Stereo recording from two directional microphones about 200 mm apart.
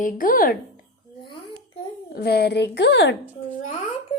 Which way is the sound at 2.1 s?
55° left (ahead or behind).